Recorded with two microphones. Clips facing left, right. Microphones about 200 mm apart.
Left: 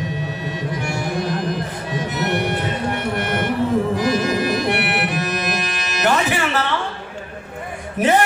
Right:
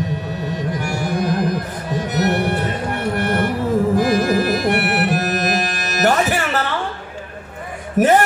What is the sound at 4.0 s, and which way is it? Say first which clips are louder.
Music: right 3 dB; 50° right (ahead or behind).